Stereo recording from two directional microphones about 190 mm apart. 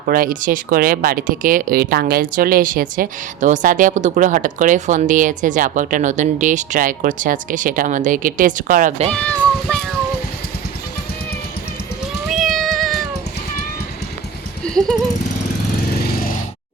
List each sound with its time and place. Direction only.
0.1 s speech: 50° right (ahead or behind)
9.0 s speech: 5° left (ahead or behind)
12.3 s cat: centre (ahead or behind)